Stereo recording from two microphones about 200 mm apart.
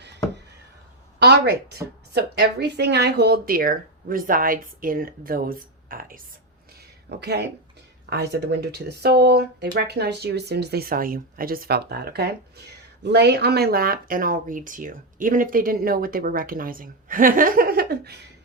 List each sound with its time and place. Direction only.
1.2 s speech: 55° right (ahead or behind)
7.2 s speech: 55° right (ahead or behind)